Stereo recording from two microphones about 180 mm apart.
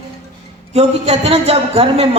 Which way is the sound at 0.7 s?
35° right (ahead or behind).